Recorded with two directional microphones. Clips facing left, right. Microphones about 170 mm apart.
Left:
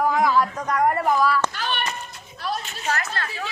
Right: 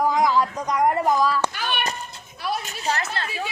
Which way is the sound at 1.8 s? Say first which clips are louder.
Right 1 dB; 35° right (ahead or behind).